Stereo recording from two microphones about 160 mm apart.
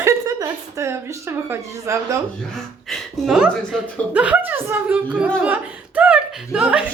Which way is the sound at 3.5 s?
5° left (ahead or behind).